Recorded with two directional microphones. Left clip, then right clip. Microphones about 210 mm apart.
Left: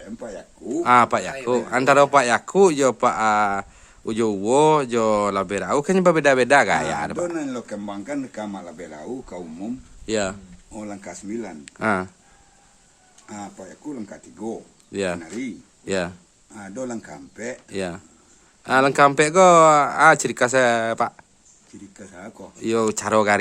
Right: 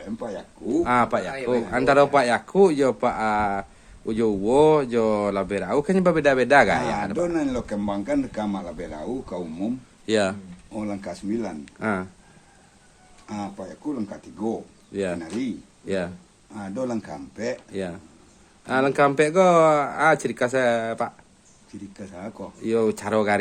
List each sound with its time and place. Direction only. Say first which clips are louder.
0.8 s a man's voice: left 5 dB; 50° left (ahead or behind)
7.2 s speech: right 2 dB; 15° right (ahead or behind)
10.1 s speech: right 2 dB; 20° left (ahead or behind)
10.7 s speech: right 3 dB; 5° right (ahead or behind)
11.6 s a man's voice: left 5 dB; 50° left (ahead or behind)
13.2 s speech: right 3 dB; 10° right (ahead or behind)
14.9 s a man's voice: left 1 dB; 50° left (ahead or behind)
16.6 s speech: right 2 dB; 10° right (ahead or behind)
17.7 s a man's voice: left 3 dB; 50° left (ahead or behind)
21.9 s speech: right 2 dB; 10° right (ahead or behind)
22.6 s a man's voice: left 1 dB; 50° left (ahead or behind)